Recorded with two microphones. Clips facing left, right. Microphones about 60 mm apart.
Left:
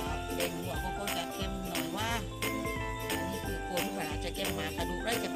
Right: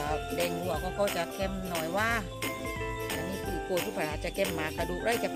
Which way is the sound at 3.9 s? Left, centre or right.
Right.